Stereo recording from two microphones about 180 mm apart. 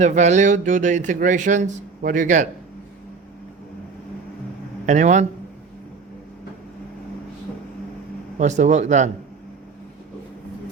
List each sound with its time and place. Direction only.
0.0 s speech: 40° right (ahead or behind)
4.9 s speech: 40° right (ahead or behind)
8.4 s speech: 40° right (ahead or behind)